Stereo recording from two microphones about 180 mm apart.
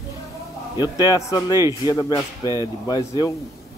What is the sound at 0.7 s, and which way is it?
A man's voice, 20° left (ahead or behind).